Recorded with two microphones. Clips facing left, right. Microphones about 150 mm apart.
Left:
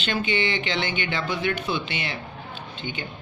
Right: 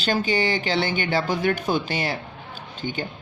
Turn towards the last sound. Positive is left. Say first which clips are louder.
# right 4 dB
turn(degrees=-40)  # may be behind; listen again after turning